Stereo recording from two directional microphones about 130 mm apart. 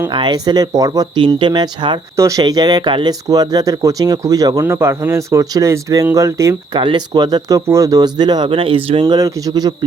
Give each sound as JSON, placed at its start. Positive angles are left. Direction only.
{"t": 0.1, "sound": "speech", "side_deg": -35}
{"t": 2.1, "sound": "speech", "side_deg": -25}
{"t": 6.7, "sound": "speech", "side_deg": -35}
{"t": 9.1, "sound": "speech", "side_deg": -30}